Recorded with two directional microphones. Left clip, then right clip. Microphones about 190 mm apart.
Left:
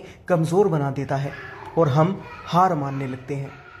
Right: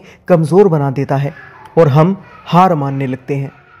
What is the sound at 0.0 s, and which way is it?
A man's voice, 45° right (ahead or behind).